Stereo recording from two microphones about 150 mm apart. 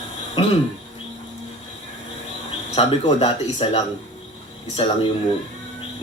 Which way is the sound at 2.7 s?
35° left (ahead or behind).